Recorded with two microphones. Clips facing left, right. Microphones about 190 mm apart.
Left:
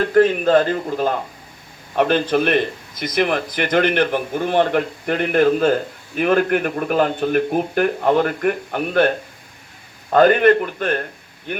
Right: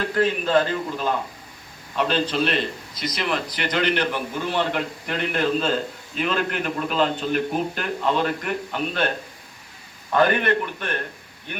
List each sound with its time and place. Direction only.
0.1 s a man's voice: 50° left (ahead or behind)
10.1 s a man's voice: 55° left (ahead or behind)